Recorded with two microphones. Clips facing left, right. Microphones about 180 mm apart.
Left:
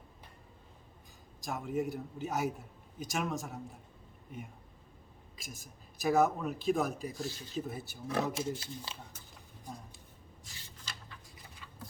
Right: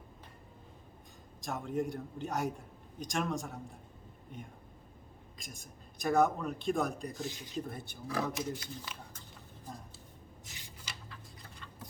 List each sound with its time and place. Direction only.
1.4 s speech: centre (ahead or behind)
7.2 s speech: 15° right (ahead or behind)
7.5 s speech: 5° left (ahead or behind)
8.0 s speech: 25° left (ahead or behind)
10.5 s a sound: 15° right (ahead or behind)